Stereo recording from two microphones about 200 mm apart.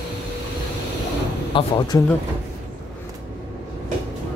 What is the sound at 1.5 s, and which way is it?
Speech, 25° left (ahead or behind).